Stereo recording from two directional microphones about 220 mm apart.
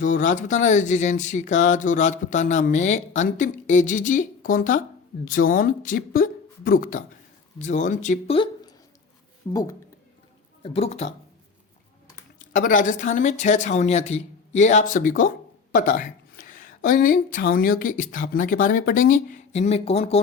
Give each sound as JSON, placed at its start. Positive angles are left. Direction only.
{"t": 0.0, "sound": "speech", "side_deg": 35}
{"t": 10.6, "sound": "speech", "side_deg": 30}
{"t": 12.5, "sound": "speech", "side_deg": 35}